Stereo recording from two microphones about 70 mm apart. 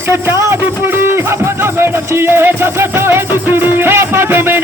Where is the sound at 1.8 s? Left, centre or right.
Right.